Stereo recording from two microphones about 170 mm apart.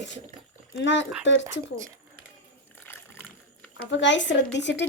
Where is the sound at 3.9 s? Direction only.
90° left.